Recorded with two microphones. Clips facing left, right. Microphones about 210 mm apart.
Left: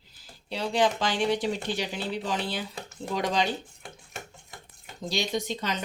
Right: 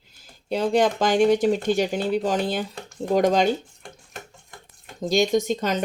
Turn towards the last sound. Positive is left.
turn(degrees=-45)  # may be behind; listen again after turning